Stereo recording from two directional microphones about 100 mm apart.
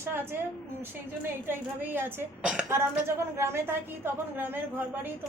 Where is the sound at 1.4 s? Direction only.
20° right (ahead or behind).